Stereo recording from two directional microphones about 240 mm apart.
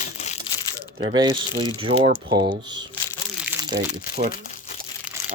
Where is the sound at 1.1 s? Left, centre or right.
Centre.